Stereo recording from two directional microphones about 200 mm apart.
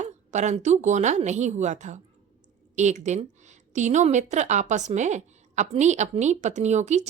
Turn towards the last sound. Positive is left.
turn(degrees=-35)  # may be behind; listen again after turning